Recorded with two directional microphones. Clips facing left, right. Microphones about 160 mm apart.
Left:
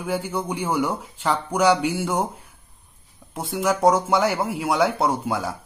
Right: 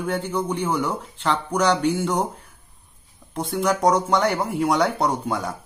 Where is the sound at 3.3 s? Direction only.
5° left (ahead or behind).